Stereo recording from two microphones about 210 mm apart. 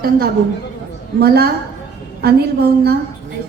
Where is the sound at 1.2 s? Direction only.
50° right (ahead or behind).